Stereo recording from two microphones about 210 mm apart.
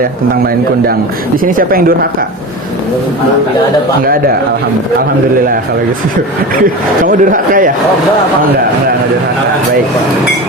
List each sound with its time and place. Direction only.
1.5 s speech: 45° right (ahead or behind)
4.0 s speech: 45° right (ahead or behind)
6.6 s speech: 40° right (ahead or behind)